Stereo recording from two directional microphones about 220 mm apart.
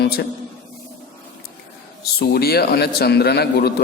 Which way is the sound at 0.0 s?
45° left (ahead or behind).